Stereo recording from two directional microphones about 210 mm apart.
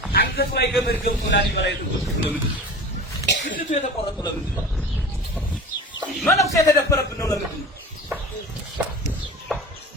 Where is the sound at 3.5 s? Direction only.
35° left (ahead or behind).